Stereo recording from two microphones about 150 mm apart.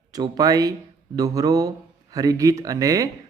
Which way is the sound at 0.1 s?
25° right (ahead or behind).